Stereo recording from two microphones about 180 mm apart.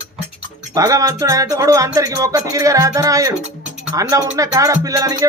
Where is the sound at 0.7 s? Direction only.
20° right (ahead or behind).